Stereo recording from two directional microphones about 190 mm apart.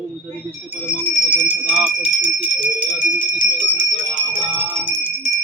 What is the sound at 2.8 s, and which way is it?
Music, 5° right (ahead or behind).